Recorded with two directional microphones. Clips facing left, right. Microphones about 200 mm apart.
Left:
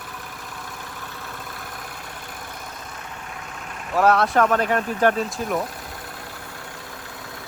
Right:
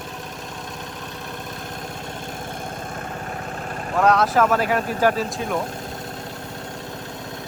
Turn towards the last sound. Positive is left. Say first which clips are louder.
# even
turn(degrees=0)  # may be behind; listen again after turning